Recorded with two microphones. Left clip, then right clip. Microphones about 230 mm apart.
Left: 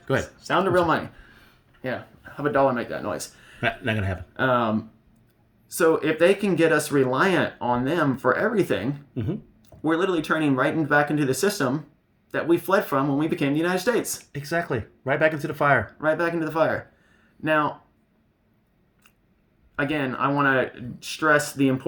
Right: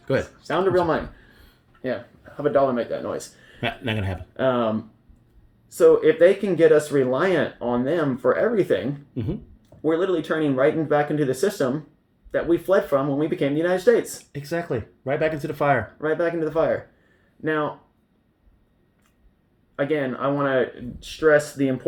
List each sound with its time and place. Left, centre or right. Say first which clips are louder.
0.0 s speech: right 2 dB; centre
1.8 s speech: right 2 dB; left
3.6 s speech: left 2 dB; centre
4.4 s speech: even; left
9.1 s speech: even; centre
9.6 s speech: right 1 dB; left
14.3 s speech: even; centre
16.0 s speech: even; left
19.7 s speech: right 2 dB; left